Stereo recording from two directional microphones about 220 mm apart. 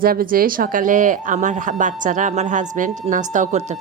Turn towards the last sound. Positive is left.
turn(degrees=-30)  # may be behind; listen again after turning